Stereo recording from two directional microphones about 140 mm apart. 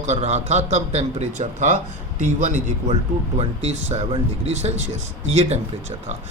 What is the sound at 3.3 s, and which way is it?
Speech, 50° right (ahead or behind).